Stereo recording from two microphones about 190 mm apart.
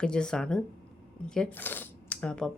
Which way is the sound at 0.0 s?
5° left (ahead or behind).